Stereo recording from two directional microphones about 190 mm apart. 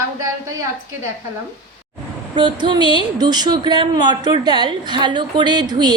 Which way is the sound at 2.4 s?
25° right (ahead or behind).